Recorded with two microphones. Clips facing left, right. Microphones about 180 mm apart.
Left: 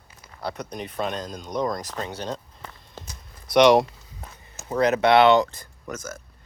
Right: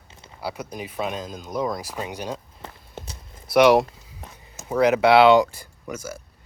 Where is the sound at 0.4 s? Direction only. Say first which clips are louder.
Even; 5° right (ahead or behind).